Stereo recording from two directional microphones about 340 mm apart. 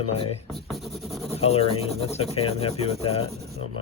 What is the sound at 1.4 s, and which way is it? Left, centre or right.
Speech, centre.